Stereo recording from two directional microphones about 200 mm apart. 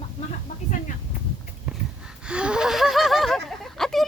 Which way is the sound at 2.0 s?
5° right (ahead or behind).